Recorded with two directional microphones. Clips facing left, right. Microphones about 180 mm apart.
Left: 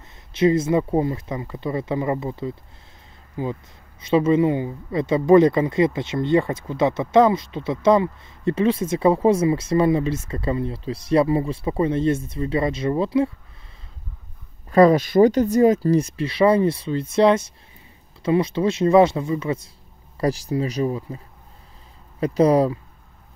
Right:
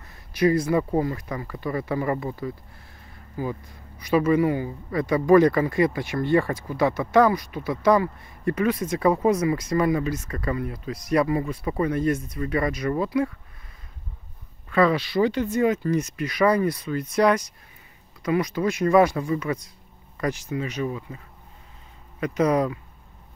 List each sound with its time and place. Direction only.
0.3 s speech: 25° left (ahead or behind)
14.7 s speech: 40° left (ahead or behind)
22.2 s speech: 30° left (ahead or behind)